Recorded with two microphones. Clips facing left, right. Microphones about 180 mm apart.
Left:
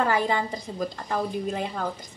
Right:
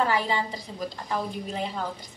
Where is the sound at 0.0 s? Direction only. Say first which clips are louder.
Left 2 dB; 50° left (ahead or behind).